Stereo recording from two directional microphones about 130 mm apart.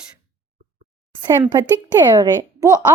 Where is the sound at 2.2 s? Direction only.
25° right (ahead or behind).